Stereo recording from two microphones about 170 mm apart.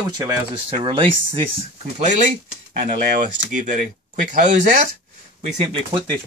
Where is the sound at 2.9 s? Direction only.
50° right (ahead or behind).